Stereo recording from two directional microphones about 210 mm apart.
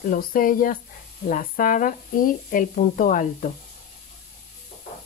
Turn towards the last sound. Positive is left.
turn(degrees=40)  # may be behind; listen again after turning